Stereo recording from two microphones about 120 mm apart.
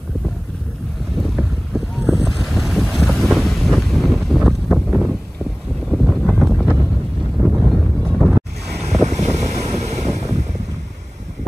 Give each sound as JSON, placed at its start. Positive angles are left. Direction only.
{"t": 1.2, "sound": "boat", "side_deg": 0}
{"t": 7.3, "sound": "a sound", "side_deg": 0}
{"t": 8.1, "sound": "boat", "side_deg": 0}
{"t": 9.0, "sound": "wind noise", "side_deg": -70}